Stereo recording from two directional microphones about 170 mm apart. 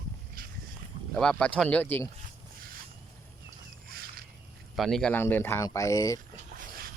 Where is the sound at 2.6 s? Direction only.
60° right (ahead or behind).